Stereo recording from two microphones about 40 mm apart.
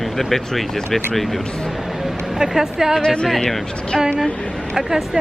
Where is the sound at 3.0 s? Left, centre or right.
Centre.